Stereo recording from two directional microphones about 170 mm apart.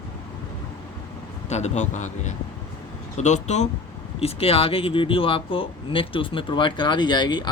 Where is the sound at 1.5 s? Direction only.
40° left (ahead or behind).